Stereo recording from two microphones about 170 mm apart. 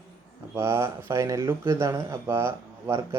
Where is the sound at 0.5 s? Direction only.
15° right (ahead or behind).